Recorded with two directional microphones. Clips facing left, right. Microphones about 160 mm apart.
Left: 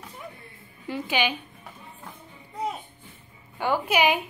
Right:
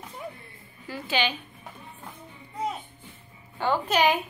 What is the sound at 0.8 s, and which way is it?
Speech, 20° left (ahead or behind).